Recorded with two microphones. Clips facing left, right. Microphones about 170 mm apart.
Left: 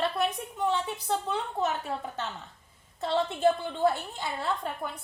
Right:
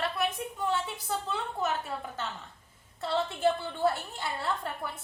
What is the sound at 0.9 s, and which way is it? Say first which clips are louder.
Speech: left 4 dB; centre (ahead or behind).